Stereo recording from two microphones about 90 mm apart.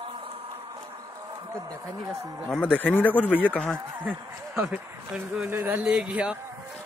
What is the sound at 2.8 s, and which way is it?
Speech, 20° left (ahead or behind).